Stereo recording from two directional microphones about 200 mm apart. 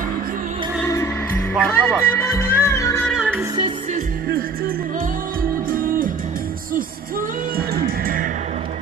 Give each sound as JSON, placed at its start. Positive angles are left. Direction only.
{"t": 0.8, "sound": "music", "side_deg": 15}
{"t": 3.1, "sound": "music", "side_deg": -5}
{"t": 5.4, "sound": "music", "side_deg": -45}
{"t": 7.5, "sound": "music", "side_deg": -50}